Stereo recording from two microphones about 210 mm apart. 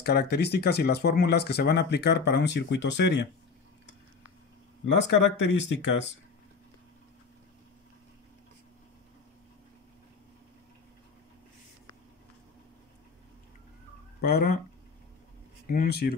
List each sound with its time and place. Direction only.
0.0 s speech: 50° left (ahead or behind)
4.8 s speech: 60° left (ahead or behind)
14.2 s speech: 50° left (ahead or behind)
15.7 s speech: 45° left (ahead or behind)